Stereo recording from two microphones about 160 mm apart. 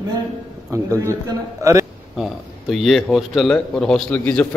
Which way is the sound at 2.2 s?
Centre (ahead or behind).